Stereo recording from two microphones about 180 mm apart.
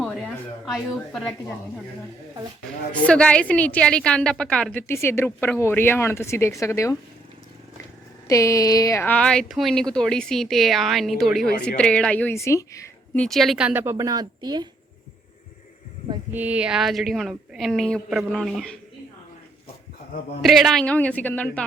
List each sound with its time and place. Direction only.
0.0 s a woman's voice: 5° right (ahead or behind)
2.9 s a woman's voice: 5° left (ahead or behind)
8.3 s a woman's voice: 20° left (ahead or behind)
13.1 s speech: centre (ahead or behind)
13.9 s a woman's voice: 20° right (ahead or behind)
16.3 s speech: 10° right (ahead or behind)
20.4 s a woman's voice: centre (ahead or behind)